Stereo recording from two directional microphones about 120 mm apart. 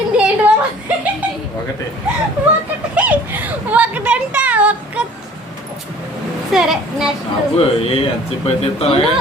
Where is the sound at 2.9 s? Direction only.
10° right (ahead or behind).